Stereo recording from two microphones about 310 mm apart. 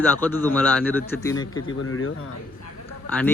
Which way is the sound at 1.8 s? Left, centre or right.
Left.